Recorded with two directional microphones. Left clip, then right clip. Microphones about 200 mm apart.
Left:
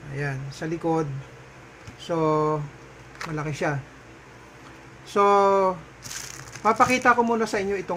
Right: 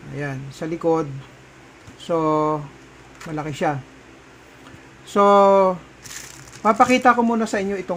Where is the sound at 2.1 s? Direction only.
40° right (ahead or behind).